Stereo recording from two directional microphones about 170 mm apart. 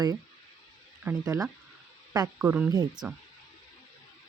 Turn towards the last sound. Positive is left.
turn(degrees=-5)  # may be behind; listen again after turning